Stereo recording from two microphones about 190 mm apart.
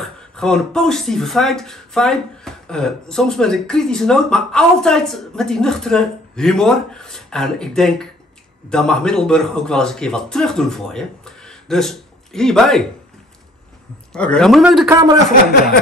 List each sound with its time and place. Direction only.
0.0 s speech: centre (ahead or behind)
14.1 s speech: 5° left (ahead or behind)
14.9 s a man's voice: 15° right (ahead or behind)